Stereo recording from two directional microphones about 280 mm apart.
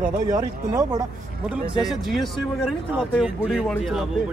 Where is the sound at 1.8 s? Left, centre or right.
Centre.